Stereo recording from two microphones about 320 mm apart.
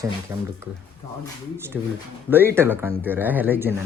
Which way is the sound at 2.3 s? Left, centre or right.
Centre.